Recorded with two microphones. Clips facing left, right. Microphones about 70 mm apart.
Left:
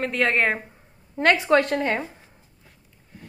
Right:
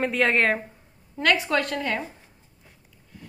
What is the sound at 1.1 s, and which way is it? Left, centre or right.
Speech, left.